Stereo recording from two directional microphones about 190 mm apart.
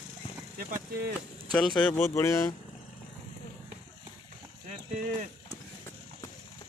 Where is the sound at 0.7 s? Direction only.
50° right (ahead or behind).